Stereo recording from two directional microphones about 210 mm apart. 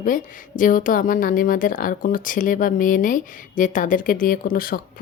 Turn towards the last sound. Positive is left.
turn(degrees=45)  # may be behind; listen again after turning